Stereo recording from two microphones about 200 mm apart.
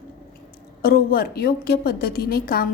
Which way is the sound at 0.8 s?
50° left (ahead or behind).